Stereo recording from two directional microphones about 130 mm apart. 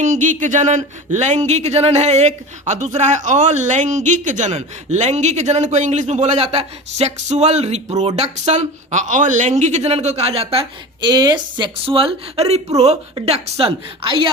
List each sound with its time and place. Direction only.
0.0 s speech: 70° right (ahead or behind); by 10.7 s 50° right (ahead or behind)
11.0 s a woman's voice: 35° right (ahead or behind)